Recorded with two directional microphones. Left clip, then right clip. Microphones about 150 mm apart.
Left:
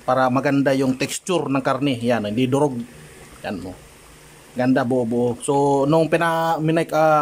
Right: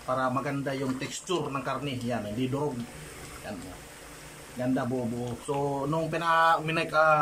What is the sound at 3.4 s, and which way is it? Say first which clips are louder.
Speech: left 13 dB; 70° left (ahead or behind).